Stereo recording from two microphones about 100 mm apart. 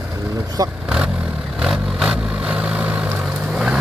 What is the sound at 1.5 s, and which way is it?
Vehicle, 5° right (ahead or behind).